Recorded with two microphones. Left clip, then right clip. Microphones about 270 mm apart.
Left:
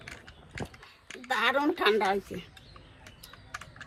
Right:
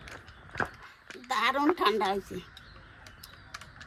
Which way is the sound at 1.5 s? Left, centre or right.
Centre.